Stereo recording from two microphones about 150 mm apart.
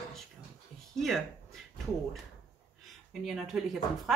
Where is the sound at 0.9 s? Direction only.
Centre (ahead or behind).